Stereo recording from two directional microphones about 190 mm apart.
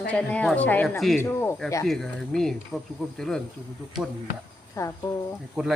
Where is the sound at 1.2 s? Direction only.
15° left (ahead or behind).